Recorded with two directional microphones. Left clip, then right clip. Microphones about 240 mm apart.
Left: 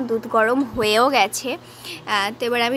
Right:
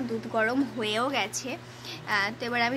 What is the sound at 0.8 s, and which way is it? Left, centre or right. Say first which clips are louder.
A woman's voice: left 14 dB; left.